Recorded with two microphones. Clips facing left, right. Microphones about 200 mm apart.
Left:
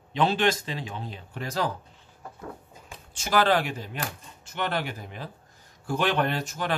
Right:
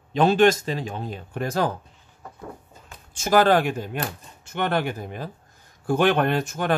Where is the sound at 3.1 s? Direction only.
45° right (ahead or behind).